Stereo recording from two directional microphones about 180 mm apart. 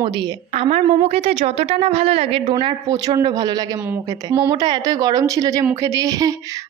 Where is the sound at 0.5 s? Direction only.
35° right (ahead or behind).